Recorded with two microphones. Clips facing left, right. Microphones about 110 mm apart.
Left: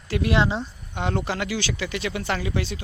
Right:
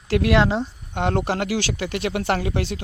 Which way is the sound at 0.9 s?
60° right (ahead or behind).